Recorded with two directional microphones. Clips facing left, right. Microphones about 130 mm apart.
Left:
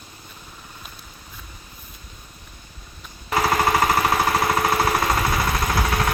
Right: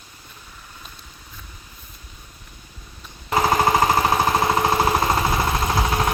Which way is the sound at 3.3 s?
20° right (ahead or behind).